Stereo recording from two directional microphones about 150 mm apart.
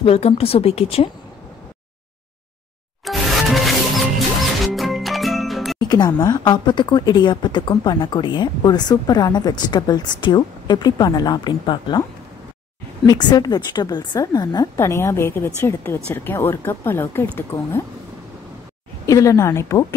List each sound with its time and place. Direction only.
0.0 s speech: 40° left (ahead or behind)
3.1 s music: centre (ahead or behind)
5.8 s speech: 30° left (ahead or behind)
13.0 s speech: 25° left (ahead or behind)
19.0 s speech: 20° left (ahead or behind)